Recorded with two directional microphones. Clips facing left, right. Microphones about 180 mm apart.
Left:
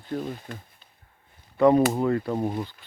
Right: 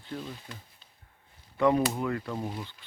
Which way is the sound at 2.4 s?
50° left (ahead or behind).